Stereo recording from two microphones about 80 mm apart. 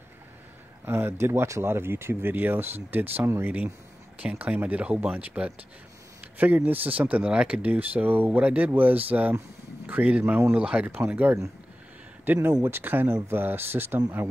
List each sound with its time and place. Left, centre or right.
0.8 s speech: right